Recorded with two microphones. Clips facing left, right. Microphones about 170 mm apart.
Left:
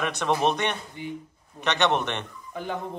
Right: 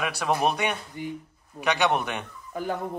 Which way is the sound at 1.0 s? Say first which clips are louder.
Right 2 dB; 45° right (ahead or behind).